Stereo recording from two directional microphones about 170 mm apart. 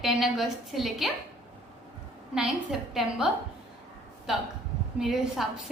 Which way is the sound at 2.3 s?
5° right (ahead or behind).